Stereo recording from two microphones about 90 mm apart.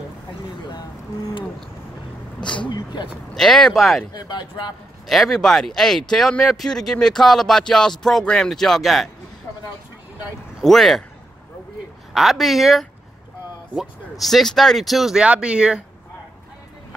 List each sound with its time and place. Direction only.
2.4 s speech: 60° left (ahead or behind)
3.3 s speech: 5° left (ahead or behind)
4.1 s speech: 50° left (ahead or behind)
5.0 s speech: centre (ahead or behind)
10.6 s speech: centre (ahead or behind)
12.1 s speech: 5° right (ahead or behind)
14.2 s speech: 5° left (ahead or behind)